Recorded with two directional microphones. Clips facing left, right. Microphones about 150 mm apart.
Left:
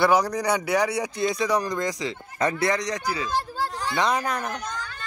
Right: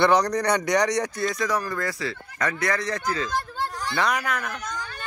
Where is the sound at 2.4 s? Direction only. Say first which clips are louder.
Left 3 dB; 25° left (ahead or behind).